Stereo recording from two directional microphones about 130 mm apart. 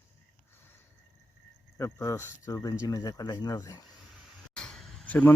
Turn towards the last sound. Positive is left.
turn(degrees=10)  # may be behind; listen again after turning